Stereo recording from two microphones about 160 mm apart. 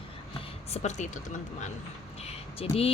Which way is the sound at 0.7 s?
45° left (ahead or behind).